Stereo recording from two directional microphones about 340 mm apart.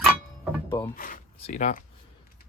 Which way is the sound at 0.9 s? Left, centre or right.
Left.